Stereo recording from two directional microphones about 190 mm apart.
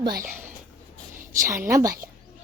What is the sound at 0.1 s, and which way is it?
Speech, 45° right (ahead or behind).